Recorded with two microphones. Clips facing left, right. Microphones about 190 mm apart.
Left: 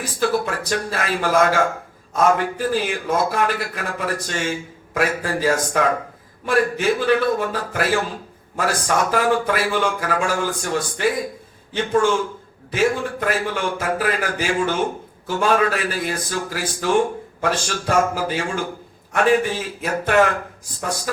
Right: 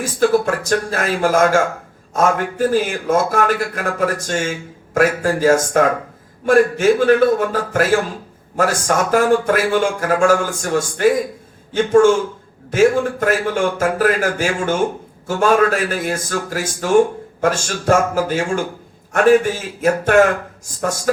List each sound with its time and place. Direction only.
0.0 s speech: 45° right (ahead or behind)